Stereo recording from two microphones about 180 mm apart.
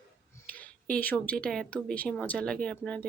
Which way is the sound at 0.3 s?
10° left (ahead or behind).